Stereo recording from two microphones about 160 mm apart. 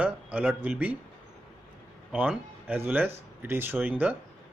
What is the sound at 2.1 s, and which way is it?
Speech, 10° right (ahead or behind).